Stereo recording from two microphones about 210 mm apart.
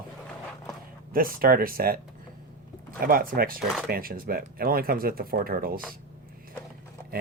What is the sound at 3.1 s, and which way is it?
Speech, 45° right (ahead or behind).